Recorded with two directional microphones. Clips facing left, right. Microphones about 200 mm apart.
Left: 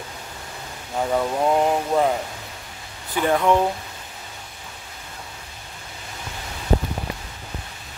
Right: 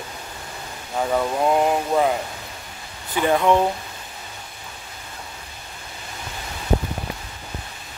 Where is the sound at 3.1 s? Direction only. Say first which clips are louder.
Right 1 dB; 15° right (ahead or behind).